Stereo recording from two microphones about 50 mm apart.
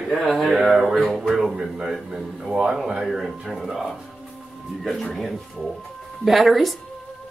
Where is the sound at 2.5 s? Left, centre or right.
Centre.